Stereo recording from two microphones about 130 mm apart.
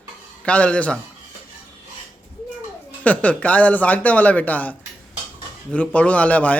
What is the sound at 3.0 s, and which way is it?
Speech, 10° left (ahead or behind).